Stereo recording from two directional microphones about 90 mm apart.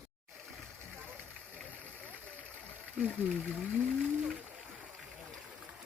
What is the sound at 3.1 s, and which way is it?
Speech, 15° left (ahead or behind).